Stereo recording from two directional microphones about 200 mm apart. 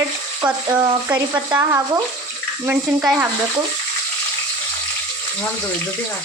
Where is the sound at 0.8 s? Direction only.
20° right (ahead or behind).